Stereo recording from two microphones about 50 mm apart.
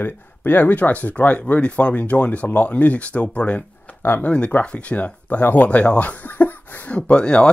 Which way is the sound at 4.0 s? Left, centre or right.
Left.